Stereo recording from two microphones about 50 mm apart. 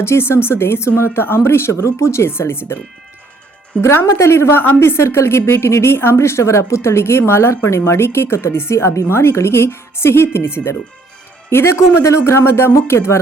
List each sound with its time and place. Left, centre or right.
0.0 s a woman's voice: left
3.8 s a woman's voice: left